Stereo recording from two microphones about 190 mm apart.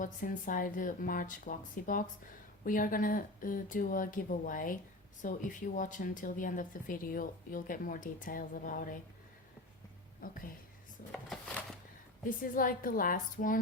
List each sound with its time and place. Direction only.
0.0 s speech: 45° left (ahead or behind)
10.2 s speech: 45° left (ahead or behind)
11.1 s a sound: 5° left (ahead or behind)
12.2 s speech: 45° left (ahead or behind)